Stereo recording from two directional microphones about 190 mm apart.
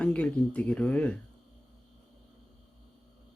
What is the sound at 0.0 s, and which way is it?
Speech, 5° left (ahead or behind).